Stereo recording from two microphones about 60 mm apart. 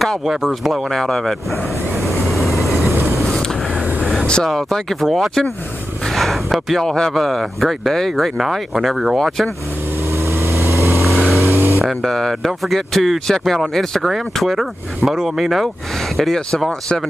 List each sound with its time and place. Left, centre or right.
0.0 s speech: centre
2.6 s vehicle: centre
4.5 s speech: centre
10.1 s vehicle: right
11.0 s vehicle: centre
11.4 s vehicle: right
11.8 s speech: centre
16.2 s speech: centre